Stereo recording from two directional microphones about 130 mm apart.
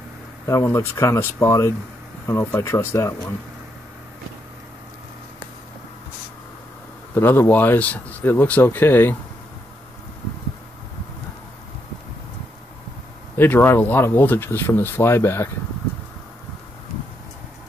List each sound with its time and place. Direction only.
0.5 s speech: 25° left (ahead or behind)
7.2 s speech: 15° left (ahead or behind)
13.4 s speech: 15° left (ahead or behind)